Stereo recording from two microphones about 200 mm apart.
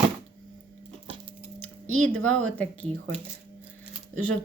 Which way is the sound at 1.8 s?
90° right.